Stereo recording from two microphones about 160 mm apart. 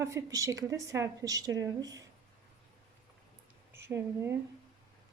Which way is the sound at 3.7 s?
15° right (ahead or behind).